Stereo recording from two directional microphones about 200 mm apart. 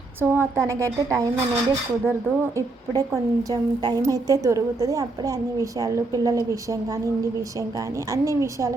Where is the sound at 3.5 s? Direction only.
20° right (ahead or behind).